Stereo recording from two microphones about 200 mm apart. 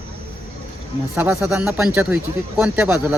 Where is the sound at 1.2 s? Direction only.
10° right (ahead or behind).